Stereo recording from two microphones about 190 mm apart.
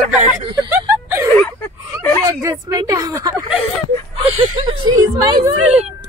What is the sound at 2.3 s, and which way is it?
A woman's voice, 15° right (ahead or behind).